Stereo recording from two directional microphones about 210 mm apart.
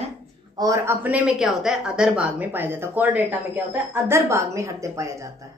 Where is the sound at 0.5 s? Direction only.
15° right (ahead or behind).